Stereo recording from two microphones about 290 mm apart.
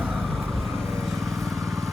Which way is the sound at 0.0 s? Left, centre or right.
Centre.